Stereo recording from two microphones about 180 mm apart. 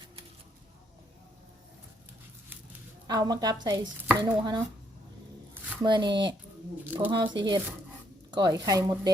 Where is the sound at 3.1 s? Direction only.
20° right (ahead or behind).